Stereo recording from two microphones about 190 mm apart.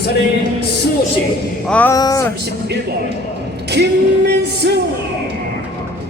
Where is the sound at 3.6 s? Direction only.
60° right (ahead or behind).